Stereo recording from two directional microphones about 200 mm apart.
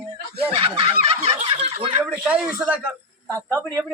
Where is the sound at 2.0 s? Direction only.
5° right (ahead or behind).